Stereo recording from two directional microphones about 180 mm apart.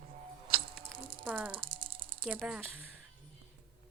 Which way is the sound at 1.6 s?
30° right (ahead or behind).